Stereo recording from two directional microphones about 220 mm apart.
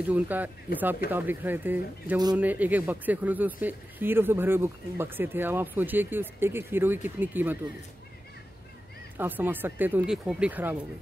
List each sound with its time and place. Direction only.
0.0 s speech: 5° right (ahead or behind)
9.1 s speech: 10° right (ahead or behind)